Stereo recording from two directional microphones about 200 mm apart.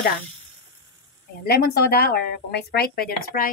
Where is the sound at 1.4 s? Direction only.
50° left (ahead or behind).